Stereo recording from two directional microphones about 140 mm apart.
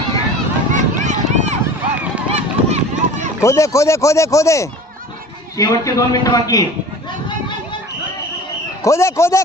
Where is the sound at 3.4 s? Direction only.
20° left (ahead or behind).